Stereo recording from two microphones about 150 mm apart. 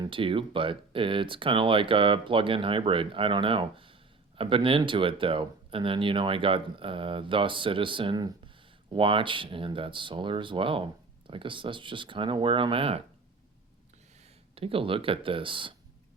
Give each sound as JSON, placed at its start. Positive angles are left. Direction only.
{"t": 0.1, "sound": "speech", "side_deg": -35}
{"t": 14.5, "sound": "speech", "side_deg": -40}